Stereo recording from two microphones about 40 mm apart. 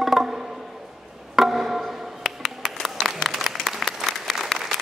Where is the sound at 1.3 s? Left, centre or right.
Centre.